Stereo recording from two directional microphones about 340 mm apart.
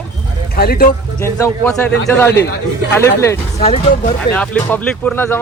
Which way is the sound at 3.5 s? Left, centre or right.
Centre.